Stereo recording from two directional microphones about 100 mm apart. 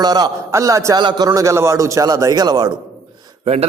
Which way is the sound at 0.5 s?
30° right (ahead or behind).